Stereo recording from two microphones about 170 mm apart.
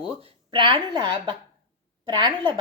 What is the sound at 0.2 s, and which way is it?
A woman's voice, 30° right (ahead or behind).